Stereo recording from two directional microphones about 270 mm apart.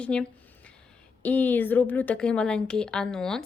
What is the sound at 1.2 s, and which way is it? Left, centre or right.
A woman's voice, centre.